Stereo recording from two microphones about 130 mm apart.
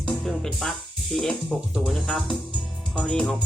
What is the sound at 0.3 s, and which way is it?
Music, 5° left (ahead or behind).